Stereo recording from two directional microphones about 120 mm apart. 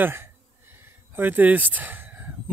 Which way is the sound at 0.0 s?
20° right (ahead or behind).